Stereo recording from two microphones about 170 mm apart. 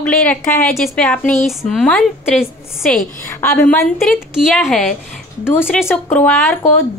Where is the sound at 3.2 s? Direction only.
15° left (ahead or behind).